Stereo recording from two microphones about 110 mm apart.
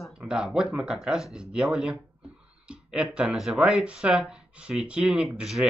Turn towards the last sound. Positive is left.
turn(degrees=-5)  # may be behind; listen again after turning